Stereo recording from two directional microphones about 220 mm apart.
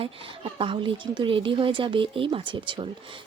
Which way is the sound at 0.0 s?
25° right (ahead or behind).